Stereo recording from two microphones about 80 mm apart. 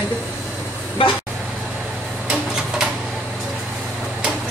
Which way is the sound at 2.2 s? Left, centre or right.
Centre.